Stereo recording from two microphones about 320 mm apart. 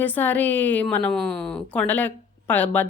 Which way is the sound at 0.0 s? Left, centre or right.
Centre.